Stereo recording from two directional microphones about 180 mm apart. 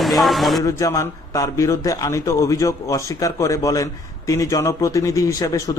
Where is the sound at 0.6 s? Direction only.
15° left (ahead or behind).